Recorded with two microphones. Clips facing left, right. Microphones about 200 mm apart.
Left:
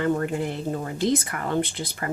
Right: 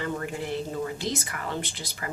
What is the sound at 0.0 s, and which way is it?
Speech, 50° left (ahead or behind).